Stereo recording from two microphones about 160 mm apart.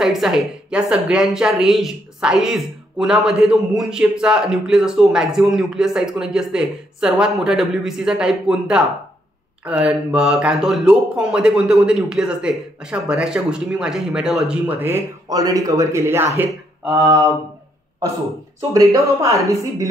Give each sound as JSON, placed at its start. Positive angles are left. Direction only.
{"t": 0.0, "sound": "a woman's voice", "side_deg": -5}
{"t": 18.7, "sound": "a woman's voice", "side_deg": -20}